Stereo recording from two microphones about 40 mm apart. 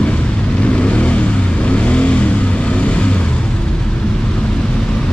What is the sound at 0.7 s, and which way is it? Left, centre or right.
Vehicle, left.